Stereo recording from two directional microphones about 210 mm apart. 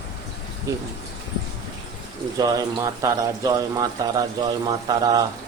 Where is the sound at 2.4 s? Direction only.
15° right (ahead or behind).